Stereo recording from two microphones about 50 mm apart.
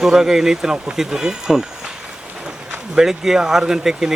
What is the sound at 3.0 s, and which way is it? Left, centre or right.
Speech, centre.